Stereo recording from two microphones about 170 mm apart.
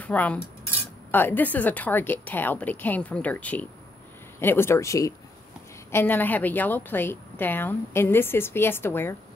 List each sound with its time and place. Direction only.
0.0 s cutlery: 10° left (ahead or behind)
1.1 s a woman's voice: 10° left (ahead or behind)